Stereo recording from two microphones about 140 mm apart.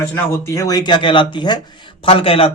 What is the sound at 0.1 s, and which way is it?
Speech, 20° left (ahead or behind).